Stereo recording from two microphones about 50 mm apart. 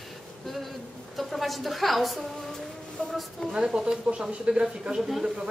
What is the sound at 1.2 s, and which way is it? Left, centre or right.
A woman's voice, centre.